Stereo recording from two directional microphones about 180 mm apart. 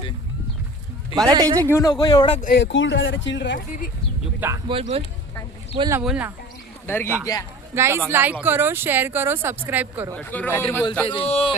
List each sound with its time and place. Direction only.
1.3 s a man's voice: 20° right (ahead or behind)
1.7 s speech: 20° left (ahead or behind)
2.4 s speech: 65° left (ahead or behind)
4.4 s speech: 15° right (ahead or behind)
4.7 s speech: 35° right (ahead or behind)
6.0 s speech: 5° right (ahead or behind)
6.8 s speech: 10° left (ahead or behind)
7.8 s speech: 15° right (ahead or behind)
10.2 s a man's voice: 10° left (ahead or behind)
11.0 s speech: 30° left (ahead or behind)